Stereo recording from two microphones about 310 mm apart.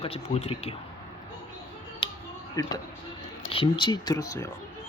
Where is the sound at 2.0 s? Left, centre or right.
Centre.